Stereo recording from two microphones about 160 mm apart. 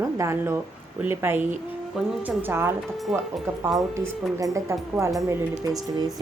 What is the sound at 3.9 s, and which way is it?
Speech, 20° right (ahead or behind).